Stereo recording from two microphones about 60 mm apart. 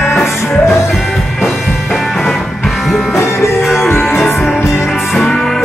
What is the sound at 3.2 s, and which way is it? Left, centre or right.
Music, left.